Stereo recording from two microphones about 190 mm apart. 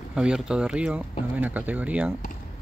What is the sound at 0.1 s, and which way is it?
Speech, 5° right (ahead or behind).